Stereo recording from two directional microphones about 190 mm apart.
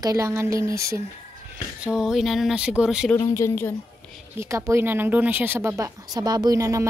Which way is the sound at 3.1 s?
15° left (ahead or behind).